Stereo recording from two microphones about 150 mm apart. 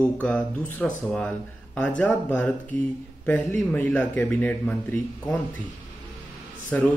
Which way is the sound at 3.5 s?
10° left (ahead or behind).